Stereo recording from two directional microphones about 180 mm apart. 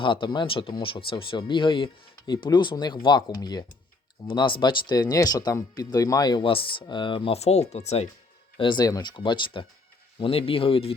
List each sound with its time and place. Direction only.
0.0 s speech: 25° left (ahead or behind)
8.5 s speech: 25° left (ahead or behind)